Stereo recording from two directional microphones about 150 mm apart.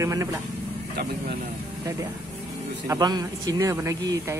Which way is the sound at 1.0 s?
90° right.